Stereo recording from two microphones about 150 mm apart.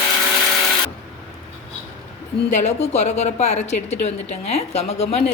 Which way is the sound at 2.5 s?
50° left (ahead or behind).